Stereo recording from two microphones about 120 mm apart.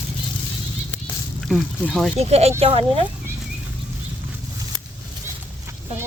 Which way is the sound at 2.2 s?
60° right (ahead or behind).